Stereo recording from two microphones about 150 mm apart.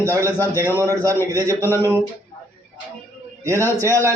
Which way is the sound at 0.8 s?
20° right (ahead or behind).